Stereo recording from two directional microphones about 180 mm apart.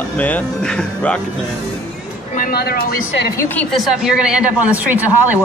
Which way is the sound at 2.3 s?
60° left (ahead or behind).